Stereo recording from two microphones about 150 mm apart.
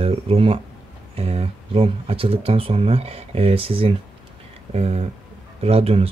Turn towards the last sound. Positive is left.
turn(degrees=-40)  # may be behind; listen again after turning